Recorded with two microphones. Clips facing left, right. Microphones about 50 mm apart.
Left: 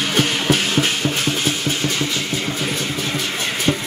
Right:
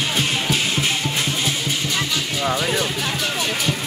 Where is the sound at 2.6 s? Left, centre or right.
Right.